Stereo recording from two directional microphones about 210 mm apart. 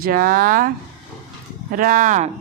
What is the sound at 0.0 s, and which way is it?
Speech, 40° right (ahead or behind).